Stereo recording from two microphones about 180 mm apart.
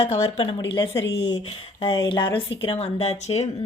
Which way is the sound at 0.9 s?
85° left.